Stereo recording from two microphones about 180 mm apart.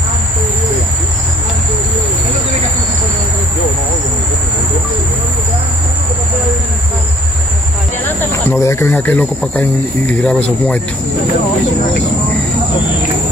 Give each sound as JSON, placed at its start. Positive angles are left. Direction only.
{"t": 8.3, "sound": "speech", "side_deg": 15}